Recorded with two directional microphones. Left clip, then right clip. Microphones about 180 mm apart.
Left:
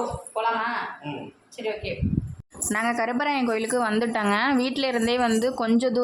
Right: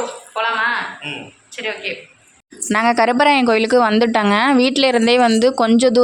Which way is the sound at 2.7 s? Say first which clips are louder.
Right 10 dB; 50° right (ahead or behind).